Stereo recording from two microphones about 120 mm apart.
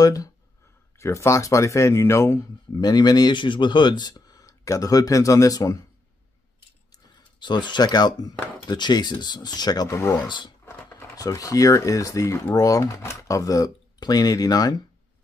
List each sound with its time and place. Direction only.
0.0 s speech: 30° left (ahead or behind)
2.8 s speech: 35° left (ahead or behind)
7.3 s speech: 40° left (ahead or behind)
10.2 s speech: 40° left (ahead or behind)
11.1 s speech: 30° left (ahead or behind)